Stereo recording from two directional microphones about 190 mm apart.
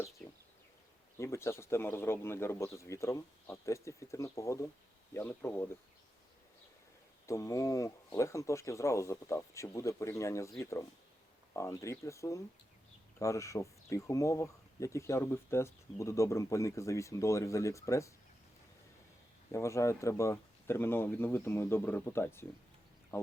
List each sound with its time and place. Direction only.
0.2 s a sound: 5° left (ahead or behind)
1.2 s speech: 15° left (ahead or behind)
7.3 s speech: 15° left (ahead or behind)
19.5 s speech: 15° left (ahead or behind)